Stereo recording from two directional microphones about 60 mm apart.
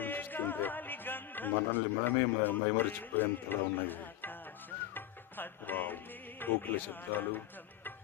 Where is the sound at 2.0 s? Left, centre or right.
Left.